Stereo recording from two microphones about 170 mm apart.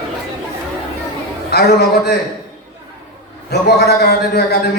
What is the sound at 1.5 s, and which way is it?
Speech, 70° left (ahead or behind).